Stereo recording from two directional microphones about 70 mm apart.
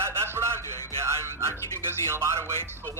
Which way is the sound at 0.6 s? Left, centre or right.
Left.